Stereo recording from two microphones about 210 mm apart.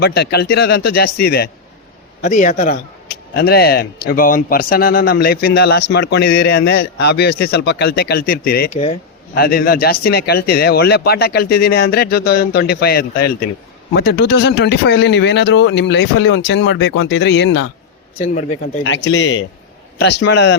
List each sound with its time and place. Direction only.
0.0 s speech: 50° left (ahead or behind)
2.2 s speech: 35° left (ahead or behind)
3.3 s speech: 50° left (ahead or behind)
8.7 s speech: 30° left (ahead or behind)
9.3 s speech: 45° left (ahead or behind)
18.2 s speech: 35° left (ahead or behind)
18.8 s speech: 60° left (ahead or behind)